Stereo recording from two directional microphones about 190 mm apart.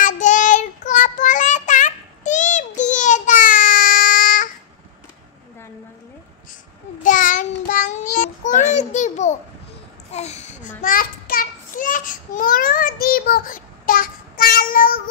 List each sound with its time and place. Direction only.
0.0 s child singing: 40° left (ahead or behind)
7.0 s child singing: 45° left (ahead or behind)
10.1 s a sound: 35° left (ahead or behind)